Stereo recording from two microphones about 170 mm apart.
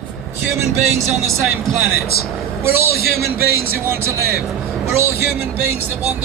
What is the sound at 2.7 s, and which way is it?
Speech, 15° right (ahead or behind).